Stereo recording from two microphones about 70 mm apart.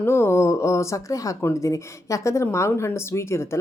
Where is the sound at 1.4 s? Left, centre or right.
Left.